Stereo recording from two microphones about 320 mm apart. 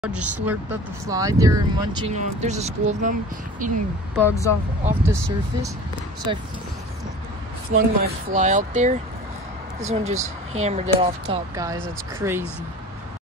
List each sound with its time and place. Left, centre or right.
0.0 s speech: centre; by 3.7 s right
4.2 s speech: centre
6.3 s speech: centre
7.7 s speech: right; by 12.4 s centre